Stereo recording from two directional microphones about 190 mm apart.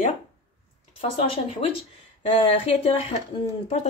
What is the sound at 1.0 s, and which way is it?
A woman's voice, 30° left (ahead or behind).